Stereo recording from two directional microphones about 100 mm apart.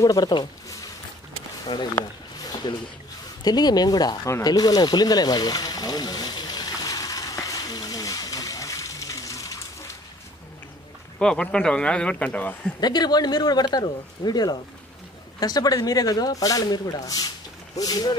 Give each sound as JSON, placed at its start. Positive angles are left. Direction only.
{"t": 0.0, "sound": "speech", "side_deg": 40}
{"t": 2.4, "sound": "a sound", "side_deg": 45}
{"t": 3.4, "sound": "speech", "side_deg": 45}
{"t": 4.3, "sound": "a sound", "side_deg": 40}
{"t": 11.1, "sound": "speech", "side_deg": 10}
{"t": 12.8, "sound": "speech", "side_deg": 45}